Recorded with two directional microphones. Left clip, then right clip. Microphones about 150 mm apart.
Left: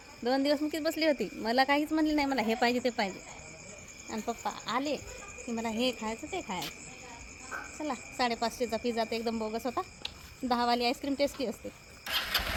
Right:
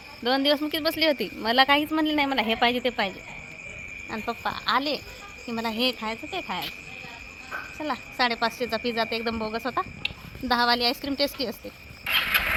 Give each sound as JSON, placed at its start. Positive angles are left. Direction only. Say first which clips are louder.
{"t": 0.3, "sound": "speech", "louder": "right 6 dB", "side_deg": 0}
{"t": 4.1, "sound": "speech", "louder": "right 5 dB", "side_deg": 5}
{"t": 7.9, "sound": "speech", "louder": "right 6 dB", "side_deg": 5}
{"t": 12.0, "sound": "vehicle", "louder": "right 8 dB", "side_deg": -20}